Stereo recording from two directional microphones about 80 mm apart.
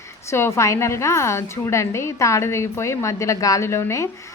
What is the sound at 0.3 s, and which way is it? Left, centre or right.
A woman's voice, left.